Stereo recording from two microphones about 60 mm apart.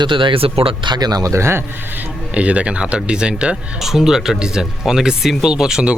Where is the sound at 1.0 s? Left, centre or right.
Right.